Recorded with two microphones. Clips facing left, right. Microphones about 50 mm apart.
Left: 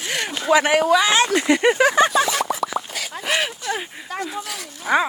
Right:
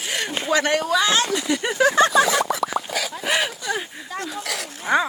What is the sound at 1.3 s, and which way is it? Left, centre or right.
Speech, left.